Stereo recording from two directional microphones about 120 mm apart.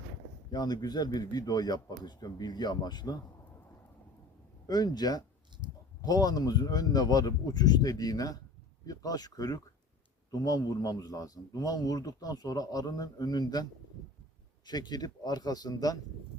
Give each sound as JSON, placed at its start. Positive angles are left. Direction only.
{"t": 0.5, "sound": "a man's voice", "side_deg": 35}
{"t": 4.6, "sound": "a man's voice", "side_deg": 35}
{"t": 14.7, "sound": "a man's voice", "side_deg": 35}